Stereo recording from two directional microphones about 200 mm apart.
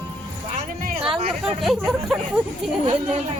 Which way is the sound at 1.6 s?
Centre (ahead or behind).